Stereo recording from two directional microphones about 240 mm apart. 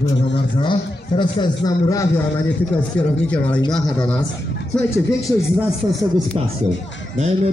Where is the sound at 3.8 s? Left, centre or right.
Centre.